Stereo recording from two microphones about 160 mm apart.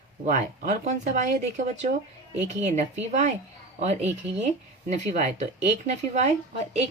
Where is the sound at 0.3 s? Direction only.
50° right (ahead or behind).